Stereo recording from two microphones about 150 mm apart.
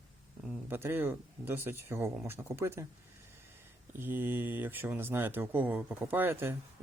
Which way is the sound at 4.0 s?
15° right (ahead or behind).